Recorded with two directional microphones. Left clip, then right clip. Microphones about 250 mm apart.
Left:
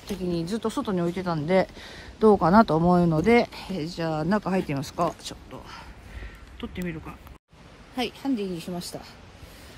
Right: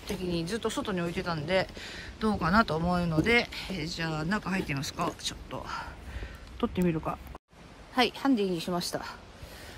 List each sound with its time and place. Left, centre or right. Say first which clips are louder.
0.0 s speech: left 3 dB; left
6.6 s a woman's voice: right 5 dB; centre